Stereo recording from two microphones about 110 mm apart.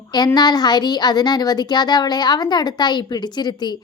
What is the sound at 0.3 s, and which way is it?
A woman's voice, 40° left (ahead or behind).